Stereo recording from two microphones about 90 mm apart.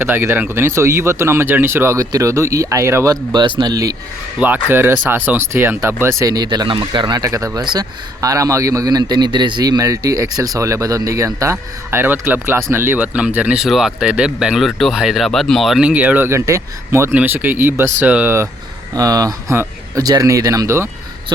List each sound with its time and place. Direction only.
0.0 s a man's voice: 25° right (ahead or behind)
3.3 s speech: 55° right (ahead or behind)
3.7 s a man's voice: 40° right (ahead or behind)
4.4 s speech: 15° right (ahead or behind); by 6.3 s 30° right (ahead or behind)
6.3 s speech: 50° right (ahead or behind)
6.7 s speech: 60° right (ahead or behind)
7.2 s a man's voice: 40° right (ahead or behind)
7.6 s speech: 55° right (ahead or behind)
8.2 s a man's voice: 40° right (ahead or behind)
13.0 s speech: 15° right (ahead or behind)
13.7 s speech: 5° right (ahead or behind)
15.8 s speech: 15° right (ahead or behind)
16.3 s a man's voice: 30° right (ahead or behind); by 18.3 s 15° right (ahead or behind)
18.9 s a man's voice: 40° right (ahead or behind)